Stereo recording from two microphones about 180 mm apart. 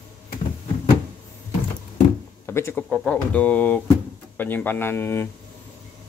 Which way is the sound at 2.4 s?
15° left (ahead or behind).